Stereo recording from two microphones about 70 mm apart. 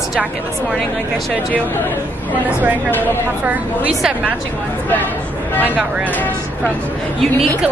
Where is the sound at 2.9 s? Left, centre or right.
Left.